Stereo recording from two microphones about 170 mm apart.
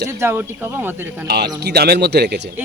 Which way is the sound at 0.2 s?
15° right (ahead or behind).